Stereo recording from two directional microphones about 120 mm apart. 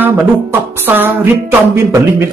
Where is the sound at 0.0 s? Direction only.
15° right (ahead or behind).